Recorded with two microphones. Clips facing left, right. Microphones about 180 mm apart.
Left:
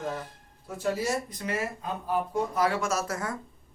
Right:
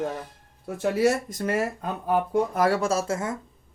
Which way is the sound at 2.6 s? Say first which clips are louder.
Right 5 dB; 35° right (ahead or behind).